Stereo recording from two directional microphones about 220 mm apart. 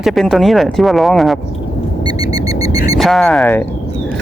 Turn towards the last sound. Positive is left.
turn(degrees=0)  # may be behind; listen again after turning